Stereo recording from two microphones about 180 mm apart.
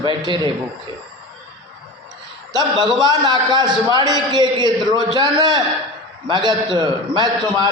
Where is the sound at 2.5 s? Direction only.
20° right (ahead or behind).